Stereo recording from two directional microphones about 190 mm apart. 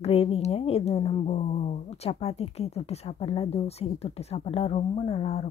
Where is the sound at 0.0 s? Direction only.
35° left (ahead or behind).